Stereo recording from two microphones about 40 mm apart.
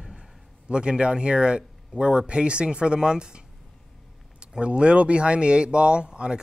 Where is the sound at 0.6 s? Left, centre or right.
Right.